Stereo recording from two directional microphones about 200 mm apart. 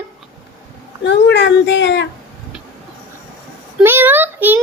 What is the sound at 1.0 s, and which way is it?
Speech, 60° left (ahead or behind).